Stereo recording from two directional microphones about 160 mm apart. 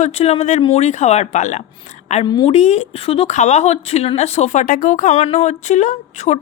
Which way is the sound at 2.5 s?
45° left (ahead or behind).